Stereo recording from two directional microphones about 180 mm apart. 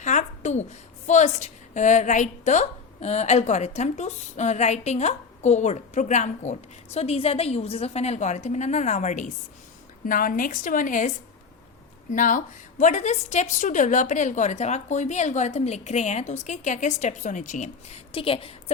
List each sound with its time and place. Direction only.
0.0 s a sound: 40° left (ahead or behind)
1.0 s a woman's voice: 40° left (ahead or behind)
12.1 s a woman's voice: 45° left (ahead or behind)
18.1 s a woman's voice: 30° left (ahead or behind)